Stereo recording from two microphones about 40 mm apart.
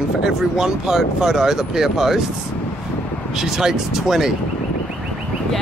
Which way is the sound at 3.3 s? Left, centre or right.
Centre.